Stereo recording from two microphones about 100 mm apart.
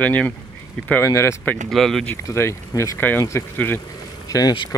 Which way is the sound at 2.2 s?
25° left (ahead or behind).